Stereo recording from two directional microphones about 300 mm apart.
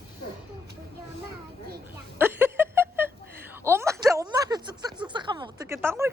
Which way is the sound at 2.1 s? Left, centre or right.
Centre.